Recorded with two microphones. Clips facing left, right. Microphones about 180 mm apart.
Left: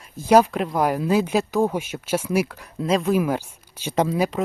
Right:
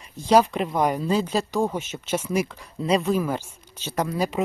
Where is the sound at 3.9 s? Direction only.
25° left (ahead or behind).